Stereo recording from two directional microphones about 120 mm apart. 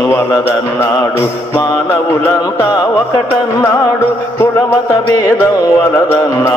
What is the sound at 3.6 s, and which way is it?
Mantra, 20° left (ahead or behind).